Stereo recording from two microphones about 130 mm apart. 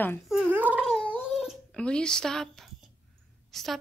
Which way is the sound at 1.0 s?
5° left (ahead or behind).